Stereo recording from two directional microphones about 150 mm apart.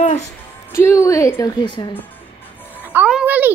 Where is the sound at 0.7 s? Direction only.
20° left (ahead or behind).